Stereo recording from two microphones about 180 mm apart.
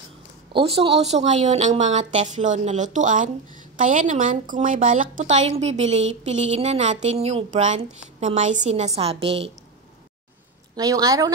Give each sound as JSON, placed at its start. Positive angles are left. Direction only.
{"t": 0.5, "sound": "a woman's voice", "side_deg": -30}
{"t": 10.8, "sound": "a woman's voice", "side_deg": -20}